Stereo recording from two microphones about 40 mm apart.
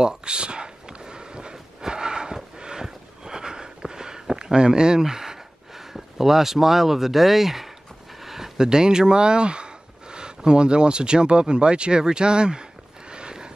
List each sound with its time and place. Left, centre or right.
0.0 s a sound: right
8.5 s speech: centre
13.1 s horse: right